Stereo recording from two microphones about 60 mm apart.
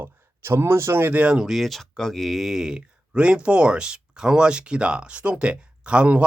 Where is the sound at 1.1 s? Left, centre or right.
Centre.